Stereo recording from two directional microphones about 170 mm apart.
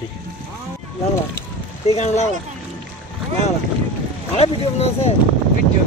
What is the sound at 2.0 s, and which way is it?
Speech, 40° left (ahead or behind).